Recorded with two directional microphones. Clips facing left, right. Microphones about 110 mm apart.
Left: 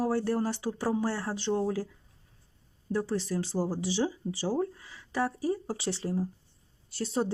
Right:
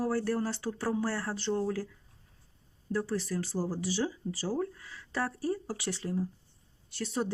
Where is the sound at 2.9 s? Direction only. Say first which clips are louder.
Left 2 dB; 20° left (ahead or behind).